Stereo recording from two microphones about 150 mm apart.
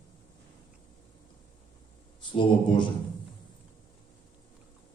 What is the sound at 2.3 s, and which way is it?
Speech, 30° left (ahead or behind).